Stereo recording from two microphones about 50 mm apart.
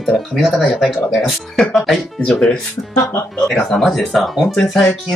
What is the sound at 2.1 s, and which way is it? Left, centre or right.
Speech, centre.